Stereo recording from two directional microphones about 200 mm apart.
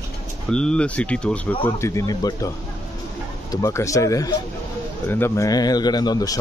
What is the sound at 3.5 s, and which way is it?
Speech, 15° left (ahead or behind).